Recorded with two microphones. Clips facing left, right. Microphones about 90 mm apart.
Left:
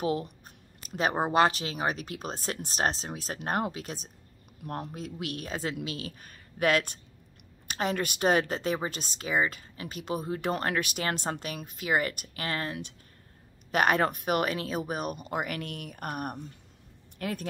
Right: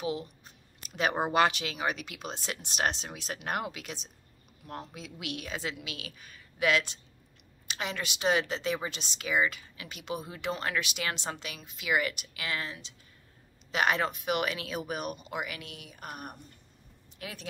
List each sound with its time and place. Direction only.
0.0 s speech: 45° left (ahead or behind)
4.6 s a woman's voice: 50° left (ahead or behind)